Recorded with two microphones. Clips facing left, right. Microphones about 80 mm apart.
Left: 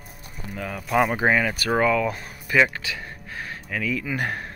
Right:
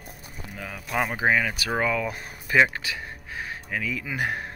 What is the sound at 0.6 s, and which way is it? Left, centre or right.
Speech, centre.